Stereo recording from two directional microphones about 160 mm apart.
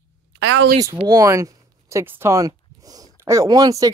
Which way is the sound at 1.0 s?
20° right (ahead or behind).